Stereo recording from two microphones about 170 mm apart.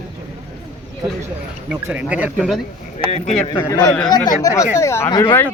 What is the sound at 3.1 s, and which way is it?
Speech, 35° left (ahead or behind).